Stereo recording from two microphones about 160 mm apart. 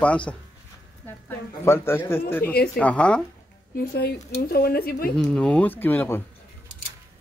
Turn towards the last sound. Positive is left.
turn(degrees=15)  # may be behind; listen again after turning